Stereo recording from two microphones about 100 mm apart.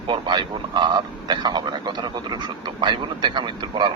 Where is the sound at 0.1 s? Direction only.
50° right (ahead or behind).